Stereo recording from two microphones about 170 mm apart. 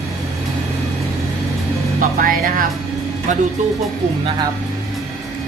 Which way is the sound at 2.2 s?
55° right (ahead or behind).